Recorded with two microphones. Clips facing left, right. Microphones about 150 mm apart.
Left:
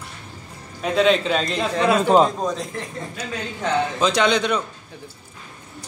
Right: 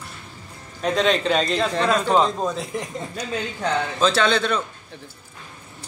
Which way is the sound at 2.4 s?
5° right (ahead or behind).